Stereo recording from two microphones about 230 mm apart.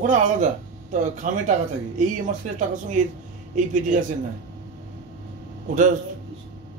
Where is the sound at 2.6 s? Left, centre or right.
Right.